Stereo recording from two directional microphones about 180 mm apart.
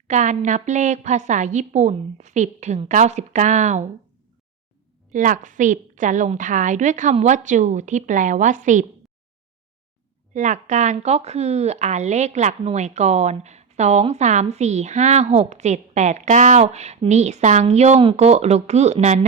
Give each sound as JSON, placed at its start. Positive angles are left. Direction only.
{"t": 0.1, "sound": "speech", "side_deg": -40}
{"t": 5.1, "sound": "a woman's voice", "side_deg": -45}
{"t": 10.3, "sound": "speech", "side_deg": -40}